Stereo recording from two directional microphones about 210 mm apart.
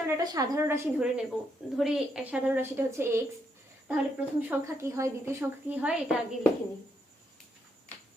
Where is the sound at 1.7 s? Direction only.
Centre (ahead or behind).